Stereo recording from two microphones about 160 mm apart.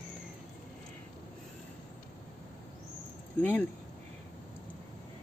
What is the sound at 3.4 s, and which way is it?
Speech, 10° left (ahead or behind).